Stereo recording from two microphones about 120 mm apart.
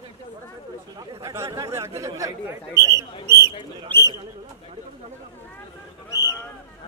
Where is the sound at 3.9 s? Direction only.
15° left (ahead or behind).